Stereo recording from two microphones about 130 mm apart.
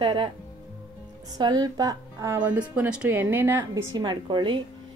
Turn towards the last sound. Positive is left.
turn(degrees=-35)  # may be behind; listen again after turning